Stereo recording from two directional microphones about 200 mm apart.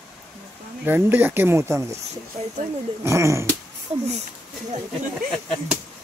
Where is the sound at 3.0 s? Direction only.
15° right (ahead or behind).